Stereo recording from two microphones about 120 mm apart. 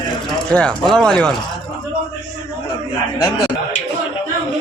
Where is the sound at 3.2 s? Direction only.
30° left (ahead or behind).